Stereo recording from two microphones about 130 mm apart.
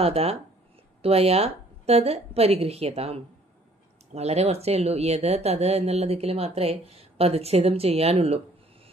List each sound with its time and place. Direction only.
0.0 s speech: 50° right (ahead or behind)